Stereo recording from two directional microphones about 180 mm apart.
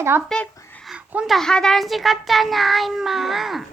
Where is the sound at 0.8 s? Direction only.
5° right (ahead or behind).